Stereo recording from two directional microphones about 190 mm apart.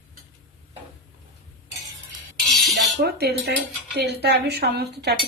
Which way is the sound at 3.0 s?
60° right (ahead or behind).